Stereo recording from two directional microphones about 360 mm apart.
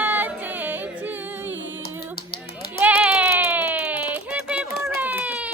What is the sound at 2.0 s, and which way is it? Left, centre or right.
Music, left.